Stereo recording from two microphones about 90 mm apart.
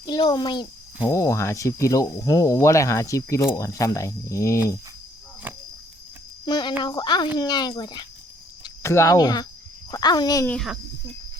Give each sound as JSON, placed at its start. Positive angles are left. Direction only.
{"t": 0.0, "sound": "speech", "side_deg": 50}
{"t": 1.1, "sound": "speech", "side_deg": 35}
{"t": 5.5, "sound": "cricket", "side_deg": -20}
{"t": 6.4, "sound": "speech", "side_deg": 55}
{"t": 8.8, "sound": "speech", "side_deg": 30}